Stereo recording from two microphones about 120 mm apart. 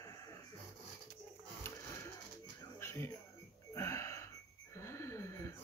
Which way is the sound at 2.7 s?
20° left (ahead or behind).